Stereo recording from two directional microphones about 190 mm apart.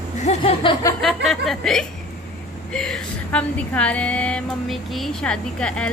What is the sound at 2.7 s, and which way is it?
A woman's voice, 5° left (ahead or behind).